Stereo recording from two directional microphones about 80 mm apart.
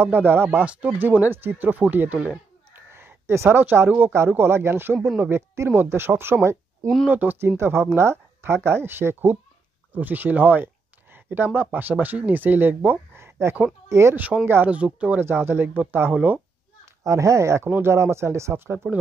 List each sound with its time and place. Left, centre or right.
0.0 s speech: right
2.7 s a sound: right
4.3 s speech: right
7.1 s speech: right
14.1 s speech: right
15.2 s speech: right
16.8 s speech: right